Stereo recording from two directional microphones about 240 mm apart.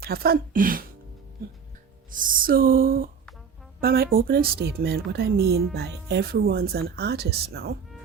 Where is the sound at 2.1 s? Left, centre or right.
Right.